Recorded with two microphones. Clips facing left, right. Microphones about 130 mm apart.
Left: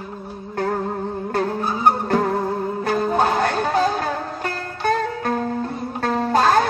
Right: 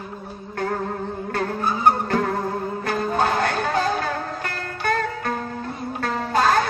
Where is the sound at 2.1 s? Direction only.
30° left (ahead or behind).